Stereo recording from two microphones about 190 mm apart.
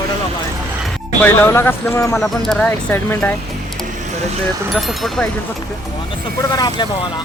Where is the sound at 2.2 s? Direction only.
Centre (ahead or behind).